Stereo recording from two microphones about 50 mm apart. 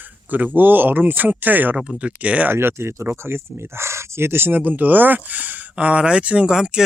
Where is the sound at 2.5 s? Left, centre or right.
Right.